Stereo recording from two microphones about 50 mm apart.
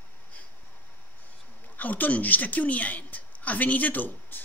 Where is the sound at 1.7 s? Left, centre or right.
Left.